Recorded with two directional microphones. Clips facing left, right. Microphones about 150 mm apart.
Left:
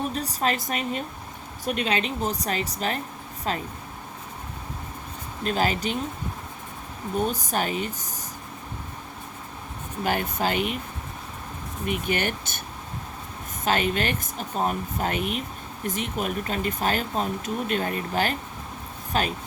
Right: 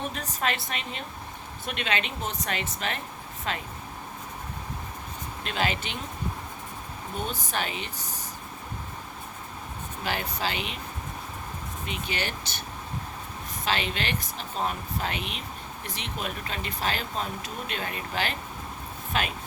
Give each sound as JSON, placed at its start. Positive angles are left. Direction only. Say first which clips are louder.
{"t": 0.1, "sound": "a woman's voice", "louder": "left 4 dB", "side_deg": 35}
{"t": 5.4, "sound": "a woman's voice", "louder": "left 5 dB", "side_deg": 40}
{"t": 7.2, "sound": "speech", "louder": "left 6 dB", "side_deg": 45}
{"t": 10.0, "sound": "speech", "louder": "left 5 dB", "side_deg": 50}
{"t": 11.9, "sound": "speech", "louder": "left 7 dB", "side_deg": 50}
{"t": 13.7, "sound": "a woman's voice", "louder": "left 5 dB", "side_deg": 45}